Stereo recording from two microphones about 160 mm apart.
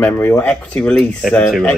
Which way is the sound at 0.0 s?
15° left (ahead or behind).